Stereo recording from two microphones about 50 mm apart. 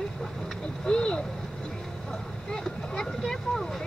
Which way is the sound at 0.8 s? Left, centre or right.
Centre.